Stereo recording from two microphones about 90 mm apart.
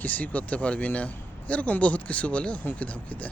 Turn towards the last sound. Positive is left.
turn(degrees=15)  # may be behind; listen again after turning